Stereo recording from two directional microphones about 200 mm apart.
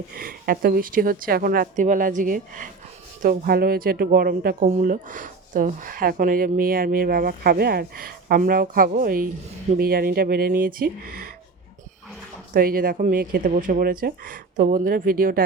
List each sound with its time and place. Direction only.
0.2 s speech: 45° right (ahead or behind)
12.5 s speech: 45° right (ahead or behind)